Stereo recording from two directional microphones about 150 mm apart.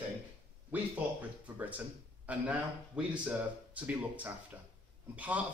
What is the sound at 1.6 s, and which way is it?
Speech, 10° right (ahead or behind).